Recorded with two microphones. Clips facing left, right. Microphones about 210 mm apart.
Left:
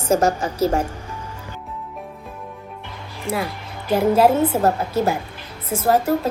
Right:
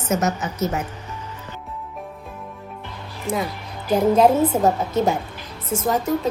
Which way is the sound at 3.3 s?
5° left (ahead or behind).